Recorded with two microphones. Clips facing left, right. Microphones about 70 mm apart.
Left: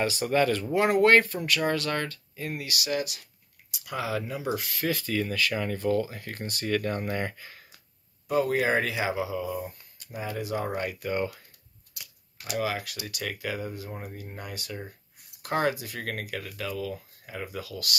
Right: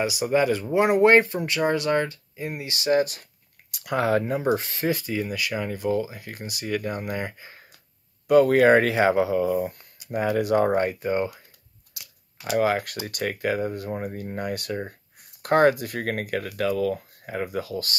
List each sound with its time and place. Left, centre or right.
0.0 s speech: centre; by 3.3 s right
3.7 s speech: right
4.6 s speech: right; by 7.3 s centre
7.3 s speech: right
8.3 s speech: right
11.0 s speech: right
12.5 s speech: right